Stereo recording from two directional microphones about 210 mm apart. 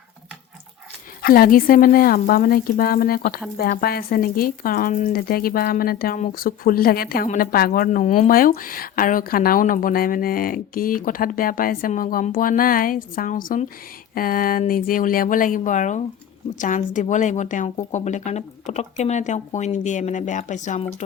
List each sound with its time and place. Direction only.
1.2 s speech: 45° left (ahead or behind)